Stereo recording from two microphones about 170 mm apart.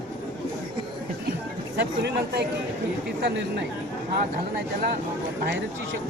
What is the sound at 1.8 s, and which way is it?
Speech, 80° right.